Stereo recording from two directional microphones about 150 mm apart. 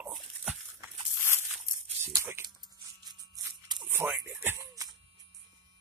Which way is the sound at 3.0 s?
30° right (ahead or behind).